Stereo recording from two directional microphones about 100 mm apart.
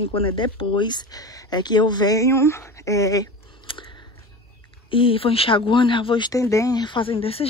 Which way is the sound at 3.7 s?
60° left (ahead or behind).